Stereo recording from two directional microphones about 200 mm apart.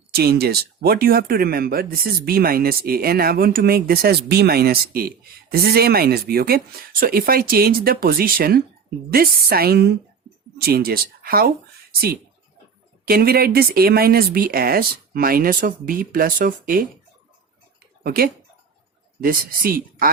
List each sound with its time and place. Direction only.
0.1 s speech: 50° right (ahead or behind)
13.1 s speech: 50° right (ahead or behind)
18.0 s speech: 45° right (ahead or behind)